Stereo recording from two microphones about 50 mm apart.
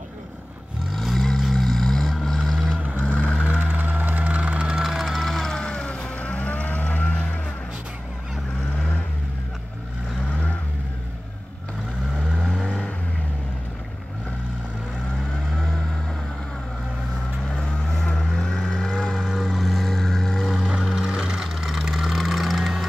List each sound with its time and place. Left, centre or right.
0.9 s vehicle: centre
3.1 s vehicle: left
3.4 s music: right
4.8 s music: centre
5.2 s vehicle: centre
5.8 s vehicle: left
12.6 s vehicle: centre
17.6 s vehicle: centre
19.1 s a sound: centre
20.8 s vehicle: centre